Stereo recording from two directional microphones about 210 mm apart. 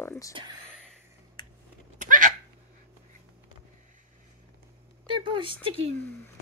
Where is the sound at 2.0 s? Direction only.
40° right (ahead or behind).